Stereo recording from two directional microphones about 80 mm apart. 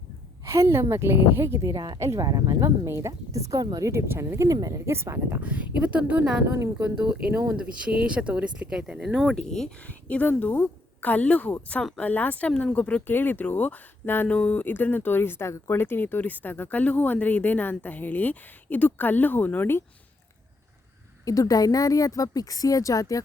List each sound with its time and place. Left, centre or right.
0.4 s a woman's voice: right
1.7 s speech: right
2.0 s a woman's voice: right
2.2 s speech: right
2.6 s a woman's voice: right
4.1 s a woman's voice: right
4.5 s speech: right
4.9 s a woman's voice: right
5.4 s speech: centre
9.3 s speech: centre
9.8 s speech: centre
21.2 s a woman's voice: left